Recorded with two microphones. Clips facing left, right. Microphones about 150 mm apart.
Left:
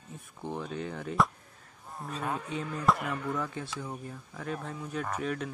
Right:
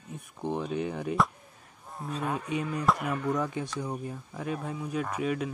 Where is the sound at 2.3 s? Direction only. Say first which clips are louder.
Right 3 dB; 15° right (ahead or behind).